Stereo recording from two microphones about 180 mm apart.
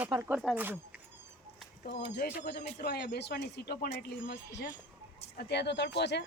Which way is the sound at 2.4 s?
65° left (ahead or behind).